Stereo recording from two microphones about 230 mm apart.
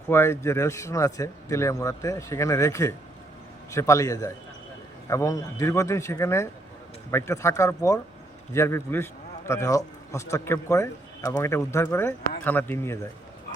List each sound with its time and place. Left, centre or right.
0.1 s speech: centre